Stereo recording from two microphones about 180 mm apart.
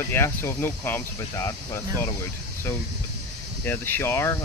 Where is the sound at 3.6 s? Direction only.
10° left (ahead or behind).